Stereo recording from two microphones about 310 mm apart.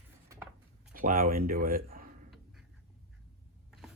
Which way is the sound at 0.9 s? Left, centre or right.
Right.